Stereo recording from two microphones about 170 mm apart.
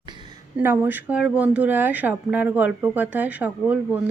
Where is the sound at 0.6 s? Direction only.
10° right (ahead or behind).